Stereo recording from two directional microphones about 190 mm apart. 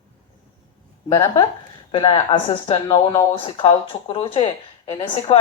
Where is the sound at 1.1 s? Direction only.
20° left (ahead or behind).